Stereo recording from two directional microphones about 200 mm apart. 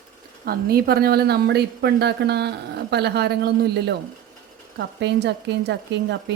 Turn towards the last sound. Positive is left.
turn(degrees=-60)  # may be behind; listen again after turning